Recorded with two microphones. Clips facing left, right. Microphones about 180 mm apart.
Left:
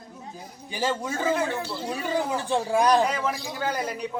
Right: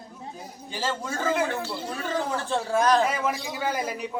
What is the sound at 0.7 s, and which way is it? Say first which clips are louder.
Speech: left 3 dB; 15° left (ahead or behind).